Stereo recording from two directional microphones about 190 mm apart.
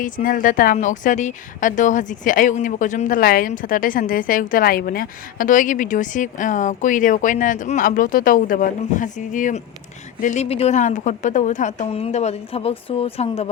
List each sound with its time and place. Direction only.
0.0 s a woman's voice: 45° left (ahead or behind)